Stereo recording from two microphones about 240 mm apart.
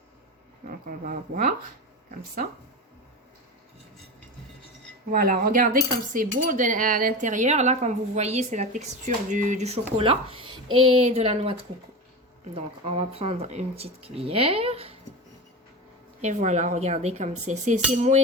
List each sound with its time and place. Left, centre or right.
0.7 s speech: right
5.1 s speech: right
12.5 s speech: right
16.2 s speech: right